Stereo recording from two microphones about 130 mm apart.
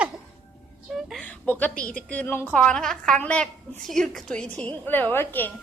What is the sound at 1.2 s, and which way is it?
A woman's voice, 10° left (ahead or behind).